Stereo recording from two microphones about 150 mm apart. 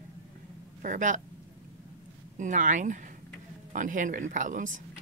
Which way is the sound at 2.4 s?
55° right (ahead or behind).